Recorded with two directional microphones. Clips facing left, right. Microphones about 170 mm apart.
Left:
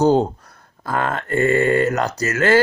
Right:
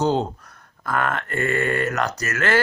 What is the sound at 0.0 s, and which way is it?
Speech, 40° left (ahead or behind).